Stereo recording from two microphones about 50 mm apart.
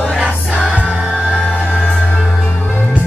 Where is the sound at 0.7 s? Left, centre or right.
Right.